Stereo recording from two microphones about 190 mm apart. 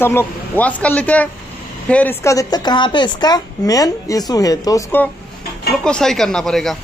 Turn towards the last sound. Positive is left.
turn(degrees=0)  # may be behind; listen again after turning